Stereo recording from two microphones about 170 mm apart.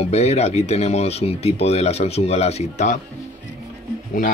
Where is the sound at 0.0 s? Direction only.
40° left (ahead or behind).